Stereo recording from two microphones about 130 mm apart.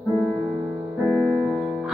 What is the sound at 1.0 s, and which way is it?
Music, centre (ahead or behind).